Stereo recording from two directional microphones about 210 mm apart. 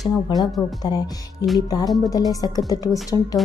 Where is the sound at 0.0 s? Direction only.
Centre (ahead or behind).